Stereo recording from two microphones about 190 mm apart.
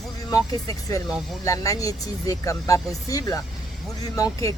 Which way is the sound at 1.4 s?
15° left (ahead or behind).